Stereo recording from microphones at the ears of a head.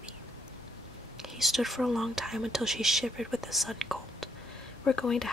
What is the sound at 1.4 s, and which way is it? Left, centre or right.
Speech, centre.